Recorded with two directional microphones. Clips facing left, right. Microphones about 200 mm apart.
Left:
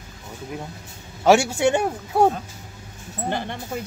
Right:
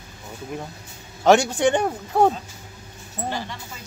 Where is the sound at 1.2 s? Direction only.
10° left (ahead or behind).